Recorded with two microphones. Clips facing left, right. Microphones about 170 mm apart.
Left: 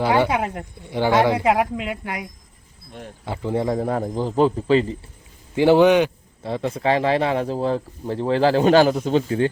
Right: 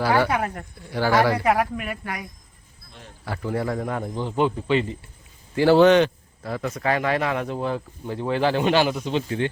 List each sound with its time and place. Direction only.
0.0 s speech: 20° left (ahead or behind)
3.2 s speech: 20° left (ahead or behind)
5.5 s a man's voice: 15° left (ahead or behind)
6.4 s speech: 25° left (ahead or behind)